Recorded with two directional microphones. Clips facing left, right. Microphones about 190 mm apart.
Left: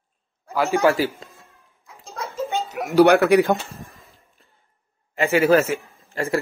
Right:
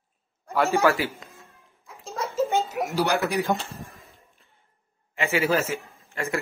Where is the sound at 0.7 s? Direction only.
15° left (ahead or behind).